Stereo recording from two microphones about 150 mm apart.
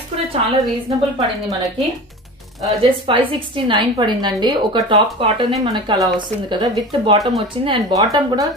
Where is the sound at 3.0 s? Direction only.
35° right (ahead or behind).